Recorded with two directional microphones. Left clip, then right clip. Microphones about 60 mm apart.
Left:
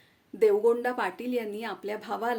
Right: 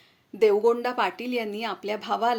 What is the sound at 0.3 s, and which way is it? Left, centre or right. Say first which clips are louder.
Speech: right 2 dB; left.